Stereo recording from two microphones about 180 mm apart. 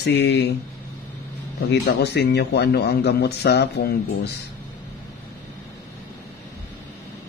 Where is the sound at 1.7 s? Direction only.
65° left (ahead or behind).